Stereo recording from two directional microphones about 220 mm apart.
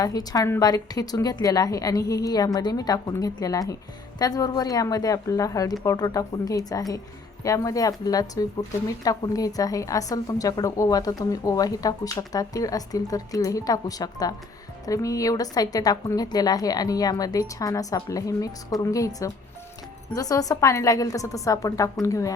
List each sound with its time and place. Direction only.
0.0 s a woman's voice: 15° left (ahead or behind)